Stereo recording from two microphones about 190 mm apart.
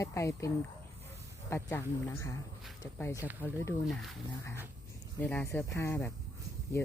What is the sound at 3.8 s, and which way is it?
Speech, centre (ahead or behind).